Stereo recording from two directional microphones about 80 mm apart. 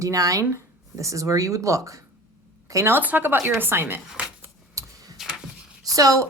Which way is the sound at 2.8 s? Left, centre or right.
Right.